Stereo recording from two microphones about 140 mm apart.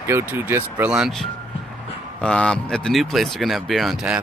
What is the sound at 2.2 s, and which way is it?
Speech, 5° left (ahead or behind).